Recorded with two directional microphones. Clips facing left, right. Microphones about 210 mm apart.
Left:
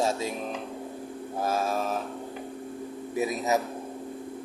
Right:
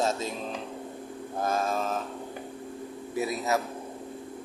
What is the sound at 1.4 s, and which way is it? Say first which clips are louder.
Speech: even; 5° left (ahead or behind).